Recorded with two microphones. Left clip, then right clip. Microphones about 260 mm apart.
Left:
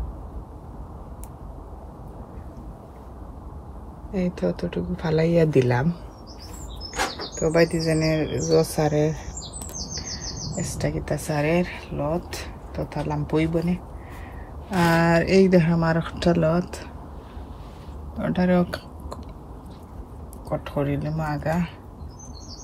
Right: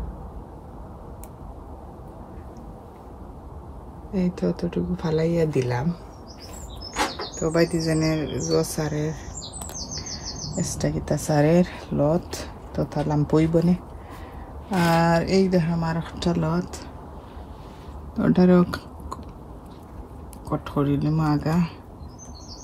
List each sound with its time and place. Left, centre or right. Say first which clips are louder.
4.1 s speech: left 1 dB; centre
7.3 s speech: left 2 dB; centre
10.6 s speech: right 1 dB; centre
14.7 s speech: even; centre
18.2 s speech: right 3 dB; centre
20.4 s speech: right 1 dB; centre